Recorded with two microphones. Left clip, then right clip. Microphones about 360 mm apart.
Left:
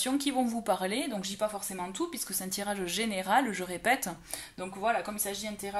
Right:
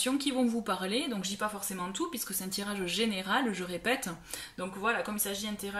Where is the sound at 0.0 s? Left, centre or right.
Centre.